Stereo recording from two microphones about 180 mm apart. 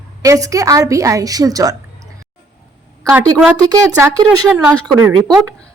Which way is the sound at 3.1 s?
15° right (ahead or behind).